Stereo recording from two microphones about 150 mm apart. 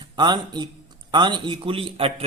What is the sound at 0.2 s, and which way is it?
A man's voice, 30° right (ahead or behind).